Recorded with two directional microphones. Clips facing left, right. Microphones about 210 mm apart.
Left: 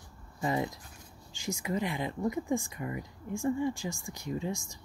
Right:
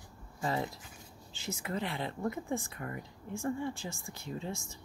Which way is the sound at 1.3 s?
15° left (ahead or behind).